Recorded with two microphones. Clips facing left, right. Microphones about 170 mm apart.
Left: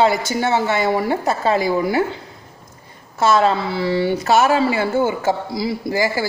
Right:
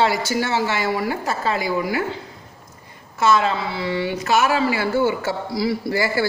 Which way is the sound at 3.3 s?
40° left (ahead or behind).